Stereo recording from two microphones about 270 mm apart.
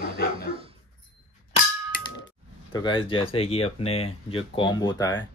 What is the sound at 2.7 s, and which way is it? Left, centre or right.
Speech, centre.